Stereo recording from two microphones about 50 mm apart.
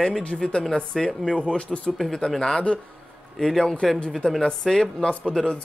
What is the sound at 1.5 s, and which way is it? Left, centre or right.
Speech, left.